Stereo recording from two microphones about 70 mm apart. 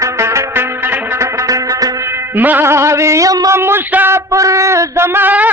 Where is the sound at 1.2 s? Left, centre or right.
Right.